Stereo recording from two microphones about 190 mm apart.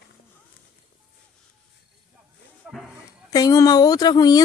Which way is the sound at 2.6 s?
5° right (ahead or behind).